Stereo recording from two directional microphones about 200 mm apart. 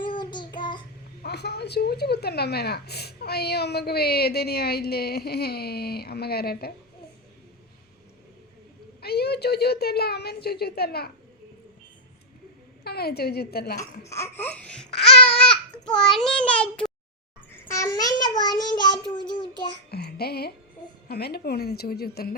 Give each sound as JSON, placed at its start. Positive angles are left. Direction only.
{"t": 0.0, "sound": "child singing", "side_deg": 25}
{"t": 1.2, "sound": "a woman's voice", "side_deg": 55}
{"t": 9.0, "sound": "a woman's voice", "side_deg": 55}
{"t": 12.8, "sound": "a woman's voice", "side_deg": 50}
{"t": 14.1, "sound": "laughter", "side_deg": 10}
{"t": 15.4, "sound": "a child's voice", "side_deg": 5}
{"t": 17.5, "sound": "child singing", "side_deg": 15}
{"t": 19.9, "sound": "a child's voice", "side_deg": 50}